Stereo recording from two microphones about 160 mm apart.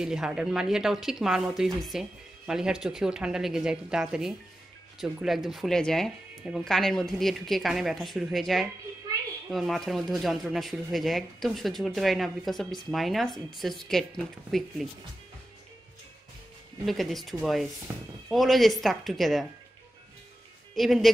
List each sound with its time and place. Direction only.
0.0 s speech: 5° right (ahead or behind)
9.1 s a sound: 25° right (ahead or behind)
9.5 s speech: centre (ahead or behind)
16.8 s speech: centre (ahead or behind)
20.7 s speech: centre (ahead or behind)